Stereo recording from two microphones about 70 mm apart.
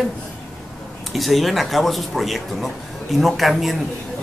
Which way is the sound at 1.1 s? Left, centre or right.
Centre.